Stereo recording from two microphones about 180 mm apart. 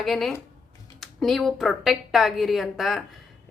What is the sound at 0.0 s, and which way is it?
A woman's voice, centre (ahead or behind).